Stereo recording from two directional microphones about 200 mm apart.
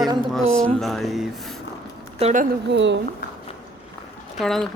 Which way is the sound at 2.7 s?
65° right (ahead or behind).